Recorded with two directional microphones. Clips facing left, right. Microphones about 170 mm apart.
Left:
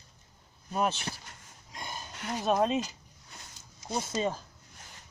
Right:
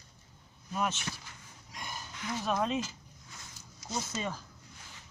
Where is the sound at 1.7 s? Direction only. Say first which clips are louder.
Left 2 dB; 25° left (ahead or behind).